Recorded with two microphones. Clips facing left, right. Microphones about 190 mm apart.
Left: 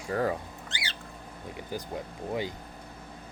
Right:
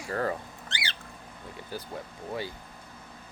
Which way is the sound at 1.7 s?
15° left (ahead or behind).